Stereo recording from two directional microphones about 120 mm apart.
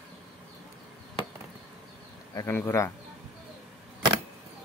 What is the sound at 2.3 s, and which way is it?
Speech, 30° left (ahead or behind).